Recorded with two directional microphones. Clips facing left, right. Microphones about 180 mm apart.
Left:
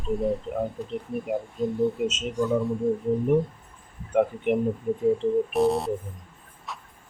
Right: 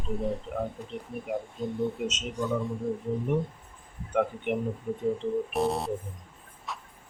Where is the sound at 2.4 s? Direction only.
Centre (ahead or behind).